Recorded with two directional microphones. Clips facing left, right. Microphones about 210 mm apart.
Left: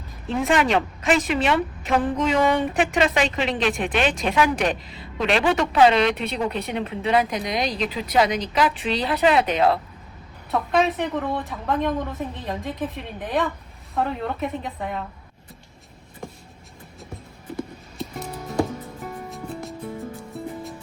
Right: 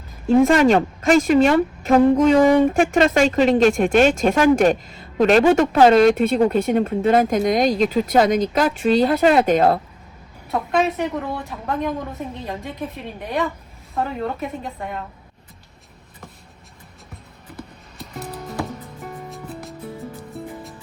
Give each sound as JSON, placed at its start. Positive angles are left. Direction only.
{"t": 0.5, "sound": "speech", "side_deg": -45}
{"t": 10.5, "sound": "a woman's voice", "side_deg": 0}
{"t": 17.6, "sound": "music", "side_deg": 0}